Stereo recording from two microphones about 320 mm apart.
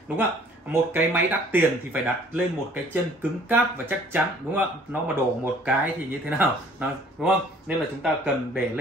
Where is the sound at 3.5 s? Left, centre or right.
Centre.